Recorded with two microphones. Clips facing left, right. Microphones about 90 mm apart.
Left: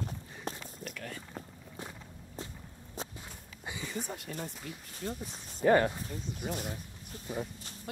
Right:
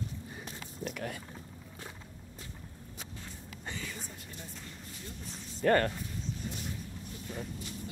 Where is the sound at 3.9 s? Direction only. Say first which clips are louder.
Left 8 dB; 70° left (ahead or behind).